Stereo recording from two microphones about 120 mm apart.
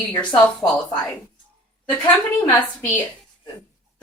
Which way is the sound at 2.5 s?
15° left (ahead or behind).